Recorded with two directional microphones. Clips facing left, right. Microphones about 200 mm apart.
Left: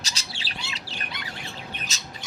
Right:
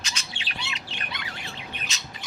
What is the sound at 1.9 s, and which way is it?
Bird, 40° left (ahead or behind).